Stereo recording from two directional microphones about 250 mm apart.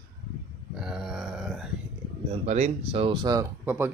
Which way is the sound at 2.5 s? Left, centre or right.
Right.